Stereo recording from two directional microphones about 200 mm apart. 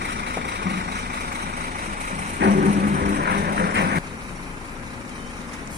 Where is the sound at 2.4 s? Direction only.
60° right (ahead or behind).